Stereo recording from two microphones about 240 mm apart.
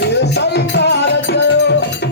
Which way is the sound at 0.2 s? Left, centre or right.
Left.